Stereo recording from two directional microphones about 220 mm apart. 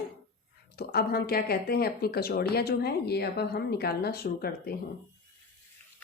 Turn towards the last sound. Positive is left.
turn(degrees=45)  # may be behind; listen again after turning